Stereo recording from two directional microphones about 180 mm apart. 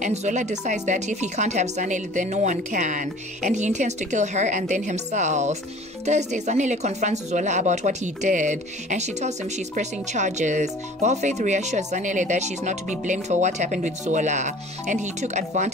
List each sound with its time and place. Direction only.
0.0 s speech: 40° right (ahead or behind)